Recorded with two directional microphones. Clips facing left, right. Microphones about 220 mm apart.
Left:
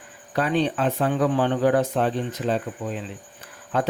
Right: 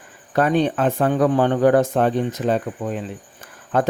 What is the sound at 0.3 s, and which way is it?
Speech, 50° right (ahead or behind).